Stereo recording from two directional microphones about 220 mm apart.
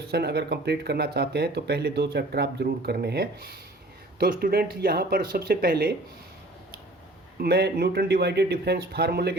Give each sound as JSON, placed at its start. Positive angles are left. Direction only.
{"t": 0.1, "sound": "speech", "side_deg": -45}
{"t": 7.4, "sound": "speech", "side_deg": -45}